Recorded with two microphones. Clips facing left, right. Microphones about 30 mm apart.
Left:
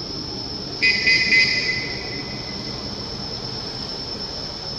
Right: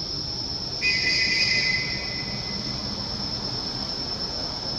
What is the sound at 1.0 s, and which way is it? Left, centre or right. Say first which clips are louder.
Music: left 9 dB; left.